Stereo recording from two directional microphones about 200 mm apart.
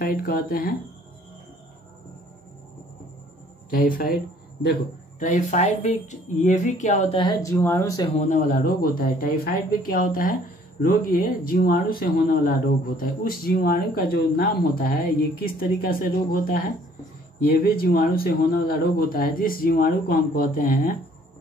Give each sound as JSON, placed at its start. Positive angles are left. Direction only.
{"t": 0.0, "sound": "speech", "side_deg": 45}
{"t": 3.7, "sound": "speech", "side_deg": 45}
{"t": 5.2, "sound": "speech", "side_deg": 35}
{"t": 8.2, "sound": "speech", "side_deg": 40}